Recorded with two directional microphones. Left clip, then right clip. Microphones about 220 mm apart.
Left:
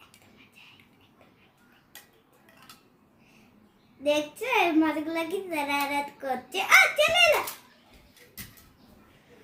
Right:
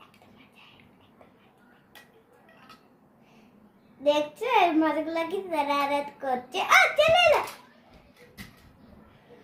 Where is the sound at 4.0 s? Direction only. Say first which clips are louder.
Right 2 dB; 20° left (ahead or behind).